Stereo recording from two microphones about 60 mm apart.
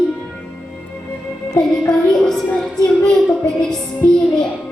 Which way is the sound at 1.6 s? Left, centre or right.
Centre.